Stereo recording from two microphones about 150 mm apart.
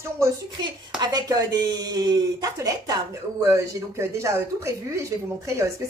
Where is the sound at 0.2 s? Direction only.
20° right (ahead or behind).